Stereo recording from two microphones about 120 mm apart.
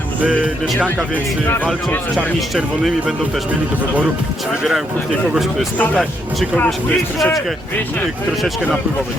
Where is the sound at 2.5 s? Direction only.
Centre (ahead or behind).